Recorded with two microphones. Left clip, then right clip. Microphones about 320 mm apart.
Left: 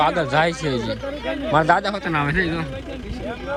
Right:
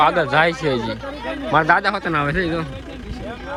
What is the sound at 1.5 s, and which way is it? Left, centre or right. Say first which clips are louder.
Speech: right 2 dB; centre.